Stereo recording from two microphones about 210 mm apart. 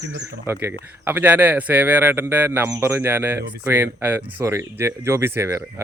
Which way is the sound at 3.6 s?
10° right (ahead or behind).